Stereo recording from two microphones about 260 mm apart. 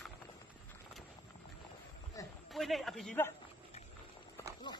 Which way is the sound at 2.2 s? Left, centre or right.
Centre.